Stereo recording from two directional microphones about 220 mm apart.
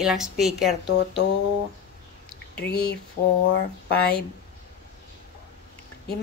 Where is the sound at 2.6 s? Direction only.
45° left (ahead or behind).